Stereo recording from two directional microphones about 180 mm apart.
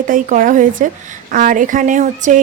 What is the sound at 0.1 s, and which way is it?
A woman's voice, 45° right (ahead or behind).